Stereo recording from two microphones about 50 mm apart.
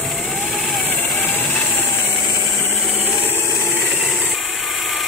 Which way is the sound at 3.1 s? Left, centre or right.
Left.